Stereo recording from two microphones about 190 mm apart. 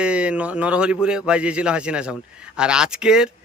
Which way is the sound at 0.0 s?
5° right (ahead or behind).